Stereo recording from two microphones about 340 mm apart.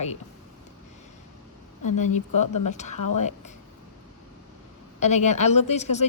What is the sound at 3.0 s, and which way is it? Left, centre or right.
Speech, left.